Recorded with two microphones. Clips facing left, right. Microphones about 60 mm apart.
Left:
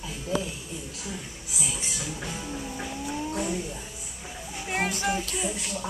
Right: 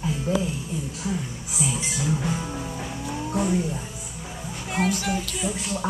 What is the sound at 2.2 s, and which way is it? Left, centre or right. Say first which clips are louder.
Music: right 6 dB; right.